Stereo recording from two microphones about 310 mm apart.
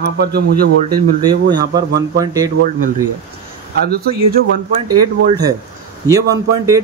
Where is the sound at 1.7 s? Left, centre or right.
Centre.